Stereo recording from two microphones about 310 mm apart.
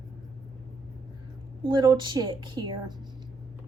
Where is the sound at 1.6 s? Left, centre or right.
Centre.